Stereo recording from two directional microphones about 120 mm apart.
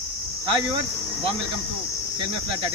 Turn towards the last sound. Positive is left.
turn(degrees=-45)  # may be behind; listen again after turning